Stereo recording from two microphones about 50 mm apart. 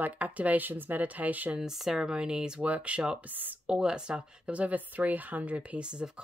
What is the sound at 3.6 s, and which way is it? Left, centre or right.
Speech, centre.